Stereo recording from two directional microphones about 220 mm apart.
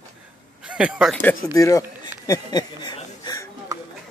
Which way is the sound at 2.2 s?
20° left (ahead or behind).